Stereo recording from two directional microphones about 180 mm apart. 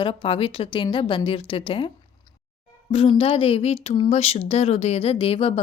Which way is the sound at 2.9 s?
30° left (ahead or behind).